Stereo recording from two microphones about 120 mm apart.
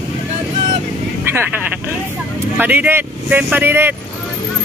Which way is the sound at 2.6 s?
15° right (ahead or behind).